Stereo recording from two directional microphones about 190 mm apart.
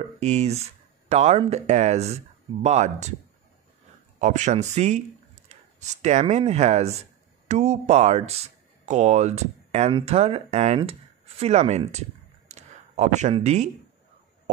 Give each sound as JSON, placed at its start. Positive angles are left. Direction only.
{"t": 0.2, "sound": "speech", "side_deg": -35}
{"t": 4.2, "sound": "speech", "side_deg": -40}
{"t": 12.4, "sound": "a sound", "side_deg": -35}